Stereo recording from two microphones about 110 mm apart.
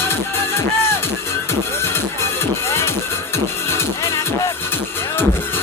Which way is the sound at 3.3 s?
25° left (ahead or behind).